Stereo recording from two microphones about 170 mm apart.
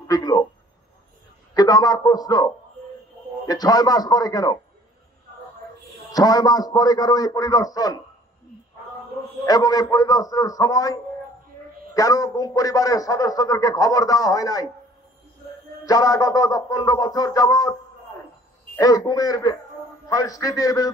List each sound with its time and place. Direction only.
0.1 s a man's voice: 20° left (ahead or behind)
1.5 s a man's voice: 20° left (ahead or behind)
6.1 s a man's voice: 20° left (ahead or behind)
9.4 s a man's voice: 20° left (ahead or behind)
15.8 s a man's voice: 20° left (ahead or behind)
18.8 s a man's voice: 20° left (ahead or behind)